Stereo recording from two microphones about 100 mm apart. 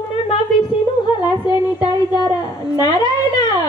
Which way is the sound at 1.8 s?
45° left (ahead or behind).